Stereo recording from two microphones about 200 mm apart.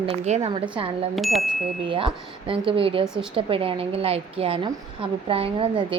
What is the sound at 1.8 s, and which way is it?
A woman's voice, 25° right (ahead or behind).